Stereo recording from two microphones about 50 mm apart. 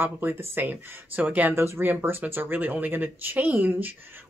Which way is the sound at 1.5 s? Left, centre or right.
Right.